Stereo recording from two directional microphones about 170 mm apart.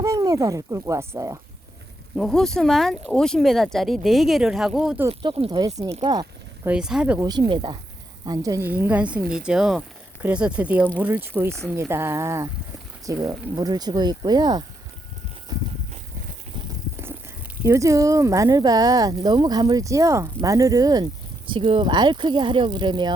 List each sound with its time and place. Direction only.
0.0 s speech: 20° right (ahead or behind)
2.1 s speech: centre (ahead or behind)
5.0 s speech: 30° right (ahead or behind)
6.7 s speech: 5° right (ahead or behind)
7.2 s a woman's voice: 25° right (ahead or behind)
17.6 s speech: 20° right (ahead or behind)